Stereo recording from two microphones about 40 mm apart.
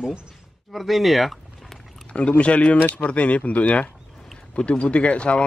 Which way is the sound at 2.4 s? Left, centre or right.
Left.